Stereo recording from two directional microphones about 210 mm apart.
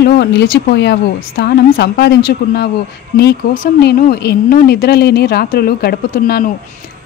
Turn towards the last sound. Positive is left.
turn(degrees=45)  # may be behind; listen again after turning